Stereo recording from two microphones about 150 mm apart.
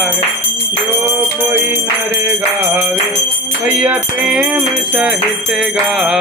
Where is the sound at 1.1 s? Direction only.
10° right (ahead or behind).